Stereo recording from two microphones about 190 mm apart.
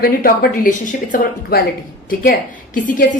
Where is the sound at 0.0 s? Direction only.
50° left (ahead or behind).